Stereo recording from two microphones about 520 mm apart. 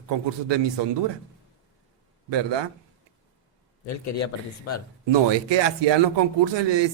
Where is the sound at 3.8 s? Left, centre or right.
Left.